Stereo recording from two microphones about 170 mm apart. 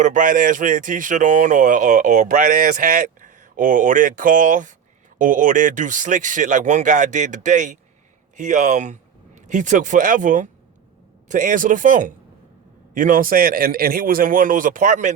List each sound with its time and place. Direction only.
0.0 s a man's voice: 50° right (ahead or behind)